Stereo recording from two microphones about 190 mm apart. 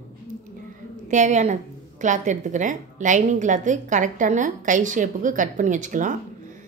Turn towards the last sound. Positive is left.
turn(degrees=-40)  # may be behind; listen again after turning